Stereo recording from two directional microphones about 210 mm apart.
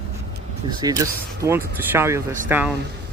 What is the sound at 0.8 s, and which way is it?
Speech, 15° right (ahead or behind).